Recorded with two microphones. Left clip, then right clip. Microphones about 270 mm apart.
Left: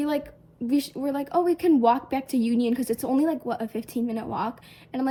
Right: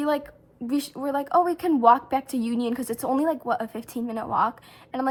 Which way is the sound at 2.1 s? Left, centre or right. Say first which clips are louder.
Right 1 dB; centre.